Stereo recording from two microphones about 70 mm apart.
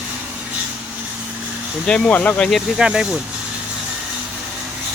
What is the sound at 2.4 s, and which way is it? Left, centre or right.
Speech, centre.